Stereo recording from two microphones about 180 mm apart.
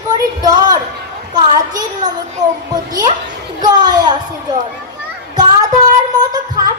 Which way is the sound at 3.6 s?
20° right (ahead or behind).